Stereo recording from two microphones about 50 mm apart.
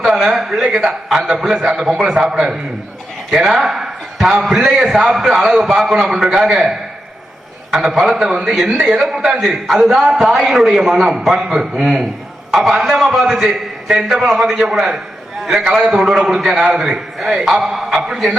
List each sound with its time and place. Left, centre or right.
0.0 s a man's voice: centre
14.8 s a sound: centre
15.6 s a man's voice: centre